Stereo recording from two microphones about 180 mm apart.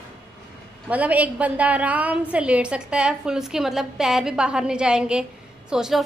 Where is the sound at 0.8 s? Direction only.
10° right (ahead or behind).